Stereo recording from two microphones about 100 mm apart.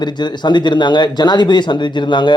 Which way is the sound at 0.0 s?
50° left (ahead or behind).